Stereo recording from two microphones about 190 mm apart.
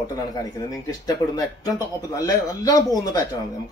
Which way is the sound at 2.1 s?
20° left (ahead or behind).